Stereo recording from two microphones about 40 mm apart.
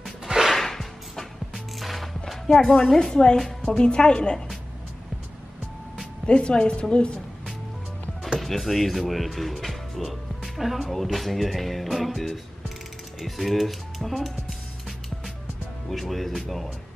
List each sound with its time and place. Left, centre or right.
0.0 s music: centre
0.5 s music: centre
2.7 s a woman's voice: centre
6.2 s speech: left
8.4 s speech: centre
15.9 s speech: centre